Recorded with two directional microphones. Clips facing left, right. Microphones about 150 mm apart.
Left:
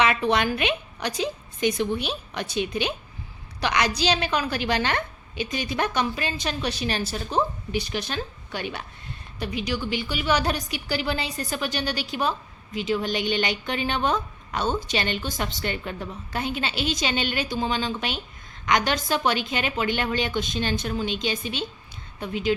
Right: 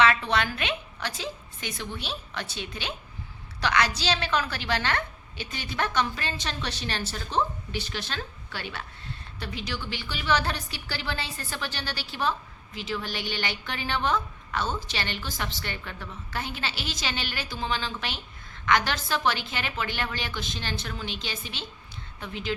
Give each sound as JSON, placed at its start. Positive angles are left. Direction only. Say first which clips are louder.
{"t": 0.0, "sound": "a woman's voice", "louder": "left 2 dB", "side_deg": 15}